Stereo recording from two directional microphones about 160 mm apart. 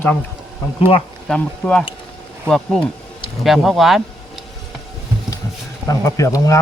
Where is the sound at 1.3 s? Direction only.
5° left (ahead or behind).